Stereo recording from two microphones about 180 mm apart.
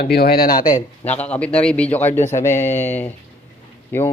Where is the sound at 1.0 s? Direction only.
10° left (ahead or behind).